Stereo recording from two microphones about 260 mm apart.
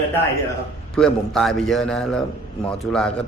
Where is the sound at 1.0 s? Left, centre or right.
Centre.